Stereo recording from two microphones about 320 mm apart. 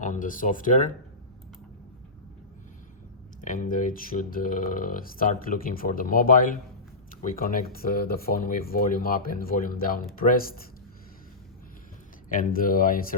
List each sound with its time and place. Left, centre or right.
0.0 s speech: left
3.4 s speech: left
12.3 s speech: left